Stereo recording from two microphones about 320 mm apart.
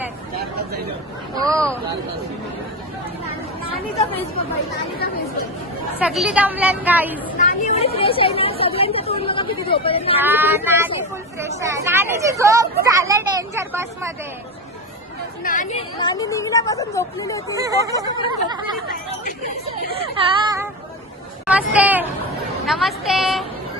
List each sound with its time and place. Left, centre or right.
1.4 s speech: centre
6.0 s speech: centre
7.4 s speech: left
10.2 s speech: centre
15.4 s speech: left
17.6 s speech: centre
17.9 s speech: centre
18.4 s speech: centre
21.4 s a sound: centre
22.6 s a woman's voice: centre